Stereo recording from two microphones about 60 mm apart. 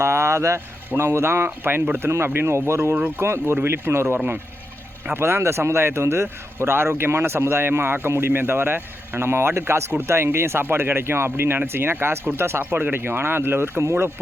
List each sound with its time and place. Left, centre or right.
0.0 s speech: right
0.9 s a man's voice: right
2.0 s a man's voice: right